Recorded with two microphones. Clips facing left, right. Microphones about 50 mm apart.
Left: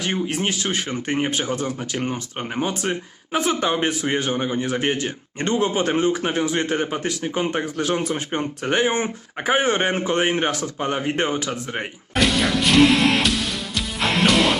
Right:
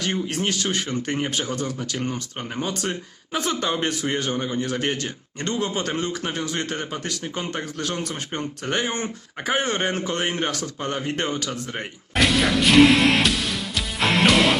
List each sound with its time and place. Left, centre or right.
0.3 s speech: centre
12.1 s music: centre